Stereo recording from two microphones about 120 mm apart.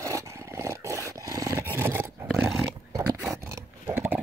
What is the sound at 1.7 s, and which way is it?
Roar, 20° right (ahead or behind).